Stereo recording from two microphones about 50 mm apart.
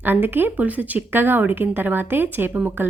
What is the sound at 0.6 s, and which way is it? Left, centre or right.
Speech, right.